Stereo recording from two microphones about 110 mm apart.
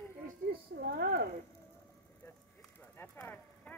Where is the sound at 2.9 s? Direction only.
20° left (ahead or behind).